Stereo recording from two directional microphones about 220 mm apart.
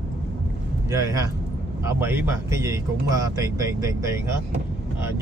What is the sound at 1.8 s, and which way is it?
Speech, 10° right (ahead or behind).